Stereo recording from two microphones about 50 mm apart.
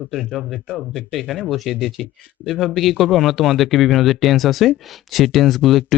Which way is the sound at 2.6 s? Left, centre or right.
Centre.